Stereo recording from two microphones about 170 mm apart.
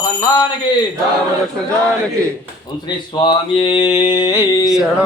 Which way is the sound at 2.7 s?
25° left (ahead or behind).